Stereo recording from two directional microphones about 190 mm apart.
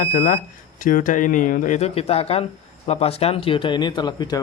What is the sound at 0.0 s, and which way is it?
Speech, 40° left (ahead or behind).